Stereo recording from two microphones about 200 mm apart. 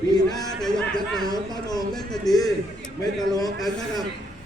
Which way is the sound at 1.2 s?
20° left (ahead or behind).